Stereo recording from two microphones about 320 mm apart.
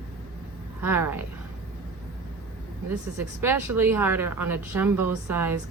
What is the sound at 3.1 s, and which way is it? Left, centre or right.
A woman's voice, centre.